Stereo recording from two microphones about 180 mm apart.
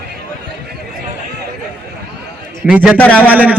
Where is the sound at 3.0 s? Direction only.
10° left (ahead or behind).